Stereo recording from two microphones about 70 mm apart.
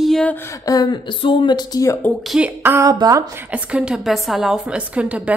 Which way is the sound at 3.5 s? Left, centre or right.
Centre.